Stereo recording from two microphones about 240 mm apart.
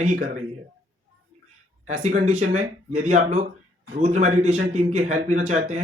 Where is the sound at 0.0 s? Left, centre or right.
Right.